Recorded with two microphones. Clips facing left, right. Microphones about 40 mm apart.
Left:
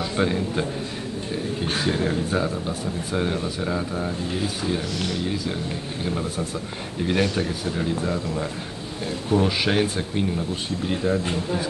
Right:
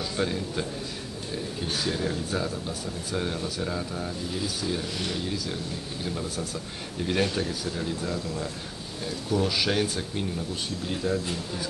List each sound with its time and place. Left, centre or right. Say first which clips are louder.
0.2 s speech: left 6 dB; left
1.7 s a man's voice: left 5 dB; left